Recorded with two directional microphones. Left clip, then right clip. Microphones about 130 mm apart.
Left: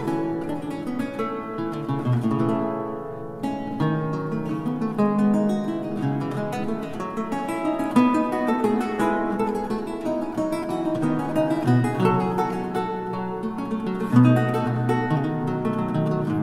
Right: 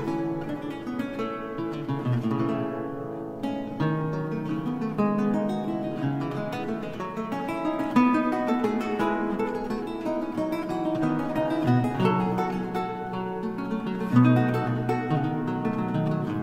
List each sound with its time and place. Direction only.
2.2 s music: 30° right (ahead or behind)
4.9 s music: 30° right (ahead or behind)
7.6 s music: 30° right (ahead or behind)
10.9 s music: 30° right (ahead or behind)
14.1 s music: 30° right (ahead or behind)